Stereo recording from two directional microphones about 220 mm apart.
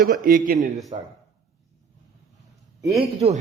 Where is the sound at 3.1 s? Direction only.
30° right (ahead or behind).